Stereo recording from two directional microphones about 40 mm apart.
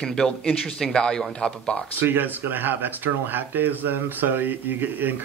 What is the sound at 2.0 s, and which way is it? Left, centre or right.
Speech, right.